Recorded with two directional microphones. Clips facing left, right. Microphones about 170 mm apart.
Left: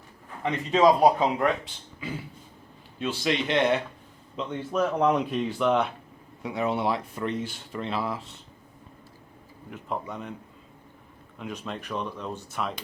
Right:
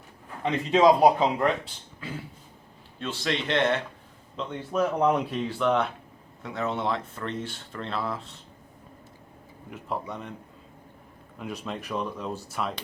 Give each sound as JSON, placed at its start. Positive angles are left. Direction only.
{"t": 0.4, "sound": "a man's voice", "side_deg": -25}
{"t": 1.0, "sound": "speech", "side_deg": 0}
{"t": 3.2, "sound": "speech", "side_deg": 5}
{"t": 4.7, "sound": "speech", "side_deg": -5}
{"t": 9.6, "sound": "speech", "side_deg": 0}
{"t": 11.3, "sound": "speech", "side_deg": 0}